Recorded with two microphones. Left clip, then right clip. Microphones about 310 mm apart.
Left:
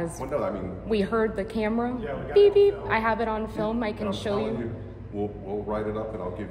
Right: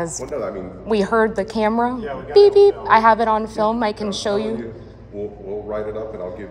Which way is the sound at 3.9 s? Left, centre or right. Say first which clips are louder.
Right 5 dB; right.